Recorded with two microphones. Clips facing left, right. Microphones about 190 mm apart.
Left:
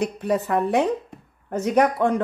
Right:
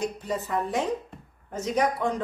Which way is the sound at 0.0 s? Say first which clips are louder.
Left 7 dB; 65° left (ahead or behind).